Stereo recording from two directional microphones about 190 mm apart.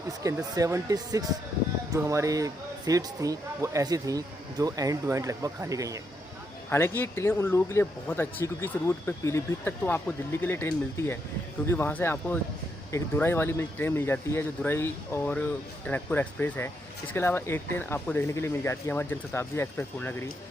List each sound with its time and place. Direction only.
0.2 s speech: 15° right (ahead or behind)
6.7 s speech: 10° left (ahead or behind)